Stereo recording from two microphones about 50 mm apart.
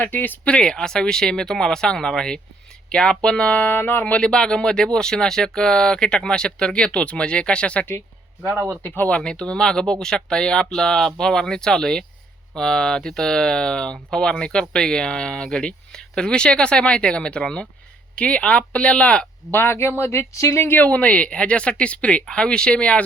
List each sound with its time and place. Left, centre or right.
0.0 s speech: left
0.4 s speech: centre
3.8 s speech: left
4.2 s speech: centre
9.0 s speech: left
19.5 s speech: left
20.0 s speech: left
20.6 s speech: left
20.8 s speech: left